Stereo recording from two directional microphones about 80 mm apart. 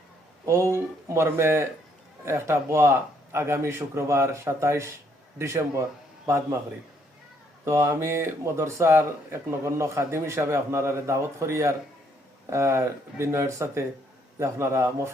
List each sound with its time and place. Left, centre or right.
0.4 s speech: right
7.6 s speech: right